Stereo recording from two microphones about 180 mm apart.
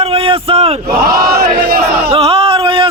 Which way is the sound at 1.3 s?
60° right (ahead or behind).